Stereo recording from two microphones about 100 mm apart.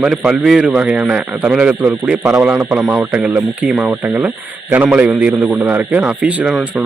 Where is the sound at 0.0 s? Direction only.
10° right (ahead or behind).